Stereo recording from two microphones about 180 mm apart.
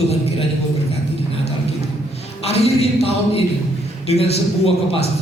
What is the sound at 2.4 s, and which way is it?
Speech, 35° left (ahead or behind).